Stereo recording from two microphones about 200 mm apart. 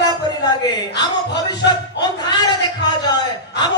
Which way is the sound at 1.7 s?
20° left (ahead or behind).